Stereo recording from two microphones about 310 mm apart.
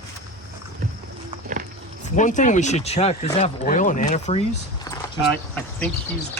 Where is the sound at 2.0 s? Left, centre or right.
Left.